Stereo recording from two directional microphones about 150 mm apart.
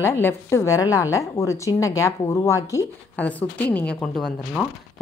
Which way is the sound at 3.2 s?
10° left (ahead or behind).